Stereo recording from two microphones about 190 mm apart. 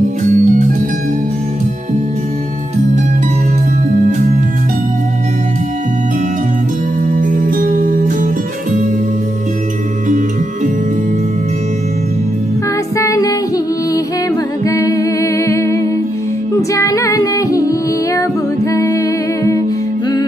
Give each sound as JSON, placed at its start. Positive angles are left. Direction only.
{"t": 0.3, "sound": "organ", "side_deg": -40}
{"t": 7.1, "sound": "music", "side_deg": -45}
{"t": 12.9, "sound": "music", "side_deg": 15}
{"t": 14.6, "sound": "humming", "side_deg": 15}
{"t": 16.7, "sound": "female singing", "side_deg": 15}